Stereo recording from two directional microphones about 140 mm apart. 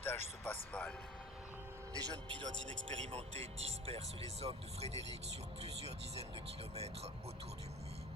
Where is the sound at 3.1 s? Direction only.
45° right (ahead or behind).